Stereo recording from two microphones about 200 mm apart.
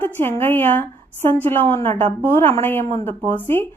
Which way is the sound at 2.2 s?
10° left (ahead or behind).